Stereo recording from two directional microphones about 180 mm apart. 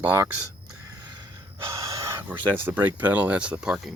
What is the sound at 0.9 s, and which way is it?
Gasp, 25° right (ahead or behind).